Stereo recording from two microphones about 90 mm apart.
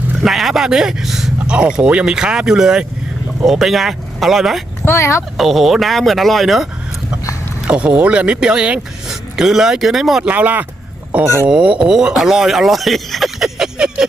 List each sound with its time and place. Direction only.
0.2 s speech: centre (ahead or behind)
4.9 s speech: 30° left (ahead or behind)
5.4 s speech: centre (ahead or behind)
7.7 s speech: 15° right (ahead or behind)
10.3 s speech: 20° right (ahead or behind)